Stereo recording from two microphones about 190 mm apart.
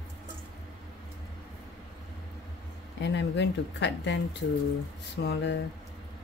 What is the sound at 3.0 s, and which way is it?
Speech, 65° left (ahead or behind).